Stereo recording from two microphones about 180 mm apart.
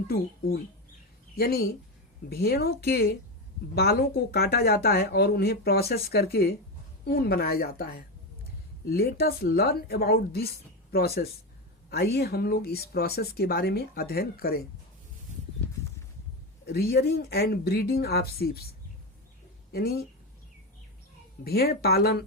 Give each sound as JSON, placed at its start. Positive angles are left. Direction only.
{"t": 0.1, "sound": "speech", "side_deg": 60}
{"t": 16.6, "sound": "speech", "side_deg": 60}
{"t": 19.7, "sound": "speech", "side_deg": 60}
{"t": 21.4, "sound": "speech", "side_deg": 60}